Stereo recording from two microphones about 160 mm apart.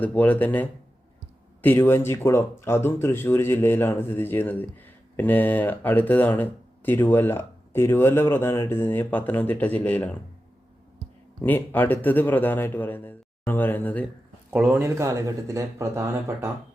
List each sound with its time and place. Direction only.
0.0 s speech: 10° left (ahead or behind)
11.3 s speech: 10° left (ahead or behind)
14.5 s speech: 15° right (ahead or behind)